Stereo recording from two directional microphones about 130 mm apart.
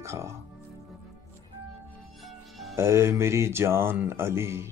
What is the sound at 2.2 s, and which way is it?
Music, centre (ahead or behind).